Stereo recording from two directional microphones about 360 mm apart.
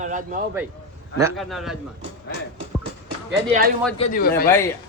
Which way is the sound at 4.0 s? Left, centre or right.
Left.